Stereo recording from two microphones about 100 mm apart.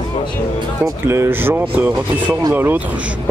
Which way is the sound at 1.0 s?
25° right (ahead or behind).